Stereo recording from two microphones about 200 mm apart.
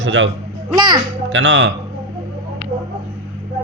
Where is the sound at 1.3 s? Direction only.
70° right (ahead or behind).